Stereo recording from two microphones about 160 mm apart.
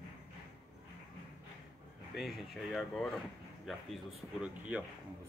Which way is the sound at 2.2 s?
Centre (ahead or behind).